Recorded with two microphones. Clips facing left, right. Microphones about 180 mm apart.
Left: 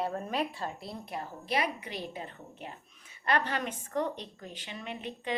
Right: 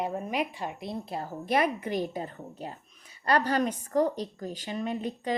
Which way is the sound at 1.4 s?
50° right (ahead or behind).